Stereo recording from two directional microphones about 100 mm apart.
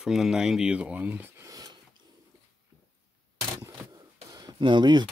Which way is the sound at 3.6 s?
35° right (ahead or behind).